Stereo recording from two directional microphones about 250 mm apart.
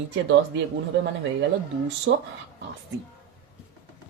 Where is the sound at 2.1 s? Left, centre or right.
Right.